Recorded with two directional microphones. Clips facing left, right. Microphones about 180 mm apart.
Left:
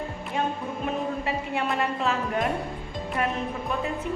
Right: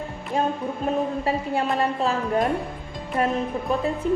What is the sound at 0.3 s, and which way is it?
Music, 35° right (ahead or behind).